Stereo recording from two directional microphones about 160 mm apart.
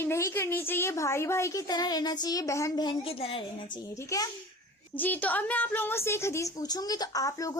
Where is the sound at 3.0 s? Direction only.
35° left (ahead or behind).